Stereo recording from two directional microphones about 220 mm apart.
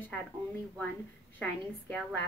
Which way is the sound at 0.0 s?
5° left (ahead or behind).